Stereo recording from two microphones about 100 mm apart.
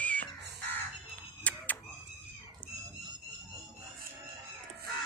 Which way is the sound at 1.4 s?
15° left (ahead or behind).